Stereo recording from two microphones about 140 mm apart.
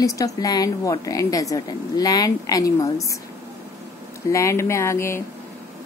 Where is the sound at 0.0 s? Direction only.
25° left (ahead or behind).